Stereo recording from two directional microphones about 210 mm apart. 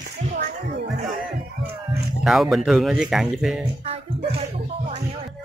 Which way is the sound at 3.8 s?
25° right (ahead or behind).